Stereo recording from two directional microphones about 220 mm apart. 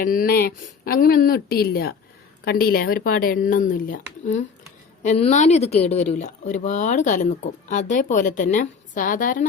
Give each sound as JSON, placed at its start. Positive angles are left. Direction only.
{"t": 0.0, "sound": "speech", "side_deg": 40}